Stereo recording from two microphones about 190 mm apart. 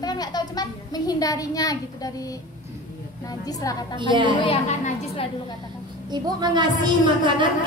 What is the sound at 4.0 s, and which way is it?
Speech, 25° right (ahead or behind).